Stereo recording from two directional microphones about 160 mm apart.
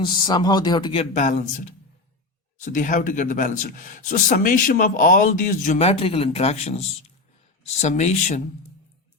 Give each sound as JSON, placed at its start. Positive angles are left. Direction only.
{"t": 0.0, "sound": "speech", "side_deg": 30}
{"t": 1.1, "sound": "a man's voice", "side_deg": 50}